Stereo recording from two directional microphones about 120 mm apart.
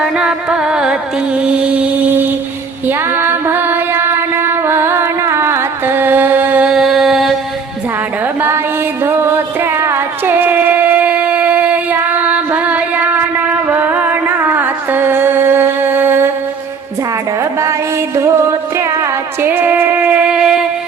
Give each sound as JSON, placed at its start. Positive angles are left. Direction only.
{"t": 0.0, "sound": "carnatic music", "side_deg": -5}
{"t": 1.4, "sound": "music", "side_deg": -10}
{"t": 2.8, "sound": "female singing", "side_deg": -15}
{"t": 8.4, "sound": "music", "side_deg": -20}
{"t": 17.6, "sound": "music", "side_deg": -25}